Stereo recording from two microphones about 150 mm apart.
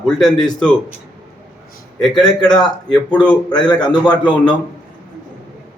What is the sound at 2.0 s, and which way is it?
A man's voice, 5° left (ahead or behind).